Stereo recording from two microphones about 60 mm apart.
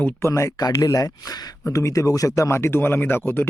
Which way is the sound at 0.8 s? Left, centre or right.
Left.